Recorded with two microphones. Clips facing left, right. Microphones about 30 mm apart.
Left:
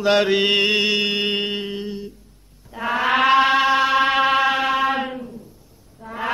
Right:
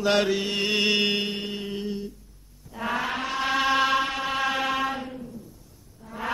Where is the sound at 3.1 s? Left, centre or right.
Left.